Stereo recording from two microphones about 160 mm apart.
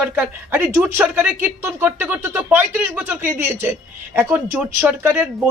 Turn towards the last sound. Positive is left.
turn(degrees=-10)  # may be behind; listen again after turning